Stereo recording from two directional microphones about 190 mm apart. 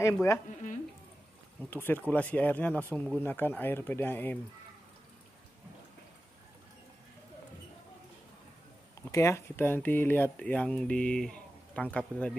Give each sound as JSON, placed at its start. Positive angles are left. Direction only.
{"t": 0.0, "sound": "speech", "side_deg": 15}
{"t": 1.7, "sound": "speech", "side_deg": 10}
{"t": 9.1, "sound": "speech", "side_deg": 15}